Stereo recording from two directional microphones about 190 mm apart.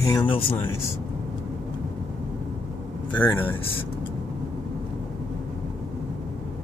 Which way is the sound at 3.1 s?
10° left (ahead or behind).